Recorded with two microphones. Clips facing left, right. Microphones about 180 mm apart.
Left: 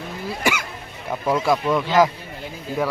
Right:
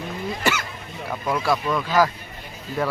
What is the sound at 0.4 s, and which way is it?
Throat clearing, 10° left (ahead or behind).